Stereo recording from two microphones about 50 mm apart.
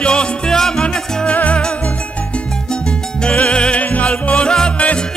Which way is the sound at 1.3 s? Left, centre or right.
Left.